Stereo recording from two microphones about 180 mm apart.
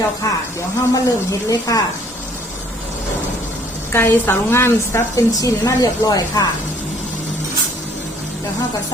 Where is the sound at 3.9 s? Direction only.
10° left (ahead or behind).